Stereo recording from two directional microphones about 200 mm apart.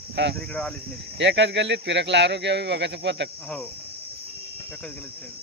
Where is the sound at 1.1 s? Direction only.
60° right (ahead or behind).